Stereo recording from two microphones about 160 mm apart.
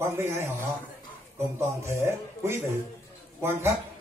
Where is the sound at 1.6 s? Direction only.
15° right (ahead or behind).